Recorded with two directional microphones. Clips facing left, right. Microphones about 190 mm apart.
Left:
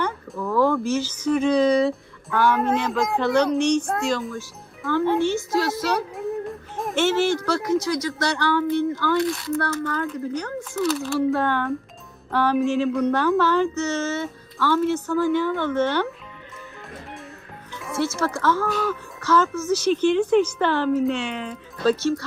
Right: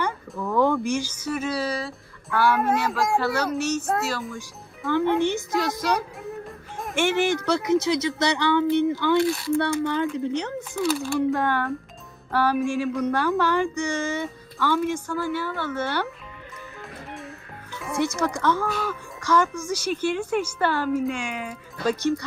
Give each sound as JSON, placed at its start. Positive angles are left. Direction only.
{"t": 0.3, "sound": "a sound", "side_deg": 0}
{"t": 0.8, "sound": "speech", "side_deg": -15}
{"t": 5.2, "sound": "speech", "side_deg": -15}
{"t": 6.1, "sound": "music", "side_deg": 0}
{"t": 6.9, "sound": "speech", "side_deg": -15}
{"t": 10.8, "sound": "speech", "side_deg": 0}
{"t": 11.3, "sound": "speech", "side_deg": -10}
{"t": 18.0, "sound": "speech", "side_deg": -15}